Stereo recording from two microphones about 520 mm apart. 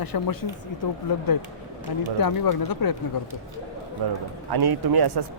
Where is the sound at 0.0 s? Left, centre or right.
Left.